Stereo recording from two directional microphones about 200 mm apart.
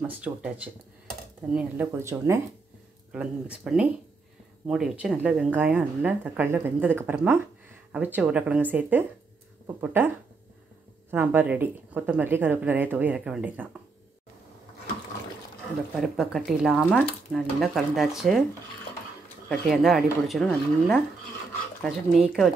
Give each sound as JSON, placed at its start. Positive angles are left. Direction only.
{"t": 0.0, "sound": "speech", "side_deg": -5}
{"t": 1.5, "sound": "speech", "side_deg": -5}
{"t": 16.0, "sound": "speech", "side_deg": 0}
{"t": 19.7, "sound": "speech", "side_deg": 0}